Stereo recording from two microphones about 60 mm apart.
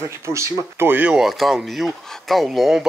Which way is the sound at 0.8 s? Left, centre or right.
Right.